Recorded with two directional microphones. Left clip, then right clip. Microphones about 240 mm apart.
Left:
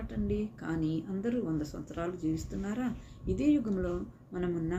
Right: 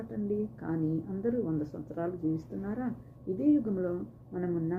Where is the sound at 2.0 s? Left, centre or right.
Centre.